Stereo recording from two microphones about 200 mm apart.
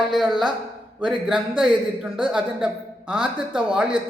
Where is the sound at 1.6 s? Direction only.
5° right (ahead or behind).